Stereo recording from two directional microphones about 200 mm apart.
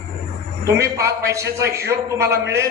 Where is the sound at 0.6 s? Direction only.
15° right (ahead or behind).